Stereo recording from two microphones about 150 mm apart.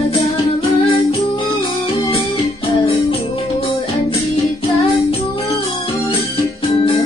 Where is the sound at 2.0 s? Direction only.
35° left (ahead or behind).